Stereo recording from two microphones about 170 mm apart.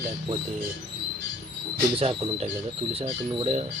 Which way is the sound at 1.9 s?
35° right (ahead or behind).